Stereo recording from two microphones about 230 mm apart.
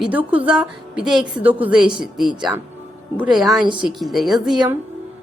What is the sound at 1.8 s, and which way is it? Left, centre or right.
Speech, right.